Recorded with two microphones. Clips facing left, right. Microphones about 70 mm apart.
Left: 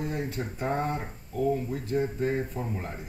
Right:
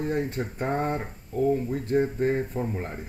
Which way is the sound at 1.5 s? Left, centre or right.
Right.